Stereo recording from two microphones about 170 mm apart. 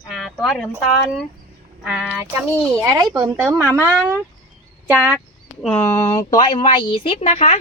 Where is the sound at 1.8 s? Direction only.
5° right (ahead or behind).